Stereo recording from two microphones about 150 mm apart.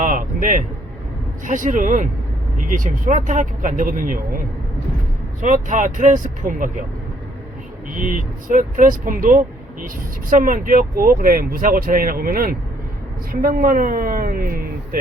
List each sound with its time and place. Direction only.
0.0 s speech: 60° right (ahead or behind)
5.4 s speech: 55° right (ahead or behind)
7.9 s speech: 60° right (ahead or behind)